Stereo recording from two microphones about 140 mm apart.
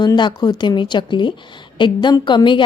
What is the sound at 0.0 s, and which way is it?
A woman's voice, 30° left (ahead or behind).